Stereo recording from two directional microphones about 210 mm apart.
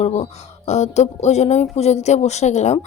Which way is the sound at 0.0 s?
30° left (ahead or behind).